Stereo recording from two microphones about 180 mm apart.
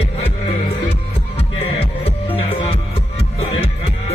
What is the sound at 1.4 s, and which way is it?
Music, 35° left (ahead or behind).